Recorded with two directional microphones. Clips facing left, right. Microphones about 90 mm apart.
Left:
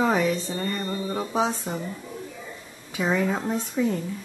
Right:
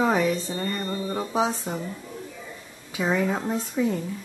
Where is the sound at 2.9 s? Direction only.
5° right (ahead or behind).